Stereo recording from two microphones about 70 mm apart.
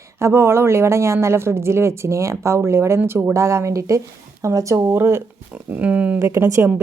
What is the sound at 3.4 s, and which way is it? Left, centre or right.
Speech, right.